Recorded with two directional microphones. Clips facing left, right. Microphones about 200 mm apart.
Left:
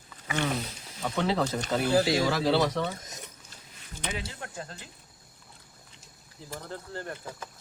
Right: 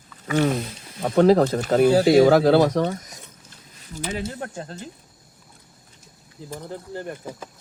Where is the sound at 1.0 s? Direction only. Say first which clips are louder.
Right 12 dB; 50° right (ahead or behind).